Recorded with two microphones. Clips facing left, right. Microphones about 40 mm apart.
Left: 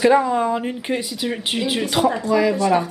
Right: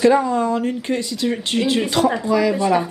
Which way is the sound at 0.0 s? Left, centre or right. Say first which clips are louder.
Even; centre.